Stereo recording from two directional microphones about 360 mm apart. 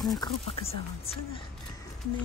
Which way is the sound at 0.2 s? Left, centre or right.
Centre.